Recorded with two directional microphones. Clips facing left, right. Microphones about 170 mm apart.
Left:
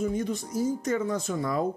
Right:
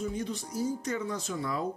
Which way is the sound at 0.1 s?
45° left (ahead or behind).